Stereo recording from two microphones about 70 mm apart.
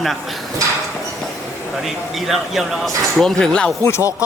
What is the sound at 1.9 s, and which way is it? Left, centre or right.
Speech, centre.